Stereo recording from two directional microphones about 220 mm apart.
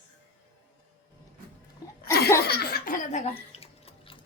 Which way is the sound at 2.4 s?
45° left (ahead or behind).